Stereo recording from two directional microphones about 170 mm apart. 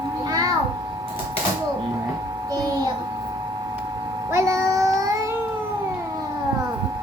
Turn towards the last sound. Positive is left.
turn(degrees=-20)  # may be behind; listen again after turning